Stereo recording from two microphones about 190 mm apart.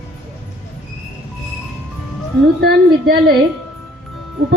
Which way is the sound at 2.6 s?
55° right (ahead or behind).